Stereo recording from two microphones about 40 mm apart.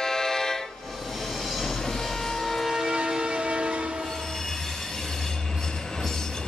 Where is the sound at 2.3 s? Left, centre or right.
Centre.